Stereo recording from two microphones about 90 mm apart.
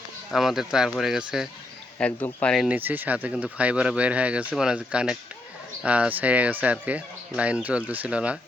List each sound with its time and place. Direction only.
0.3 s speech: 5° right (ahead or behind)
2.0 s speech: 10° left (ahead or behind)
2.6 s speech: 20° right (ahead or behind)